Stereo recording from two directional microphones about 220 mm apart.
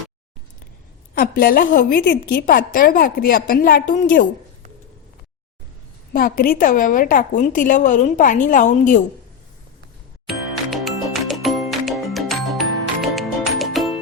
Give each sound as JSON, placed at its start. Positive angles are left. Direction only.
{"t": 1.1, "sound": "a woman's voice", "side_deg": 40}
{"t": 6.1, "sound": "a woman's voice", "side_deg": 40}
{"t": 10.2, "sound": "music", "side_deg": 0}